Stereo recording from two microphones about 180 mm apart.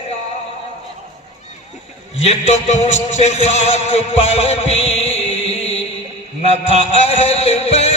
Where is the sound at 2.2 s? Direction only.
40° left (ahead or behind).